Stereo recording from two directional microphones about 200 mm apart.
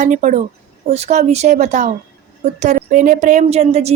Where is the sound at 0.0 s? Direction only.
35° right (ahead or behind).